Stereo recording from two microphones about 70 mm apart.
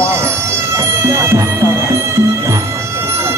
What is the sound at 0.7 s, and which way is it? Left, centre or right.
Music, right.